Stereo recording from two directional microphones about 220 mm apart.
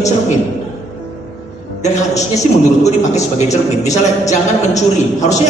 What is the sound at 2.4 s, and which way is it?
Speech, 30° left (ahead or behind).